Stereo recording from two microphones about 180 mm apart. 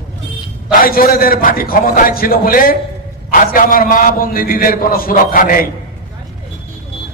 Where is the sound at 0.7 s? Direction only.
50° left (ahead or behind).